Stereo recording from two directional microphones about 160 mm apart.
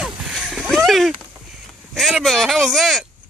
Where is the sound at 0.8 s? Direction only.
Centre (ahead or behind).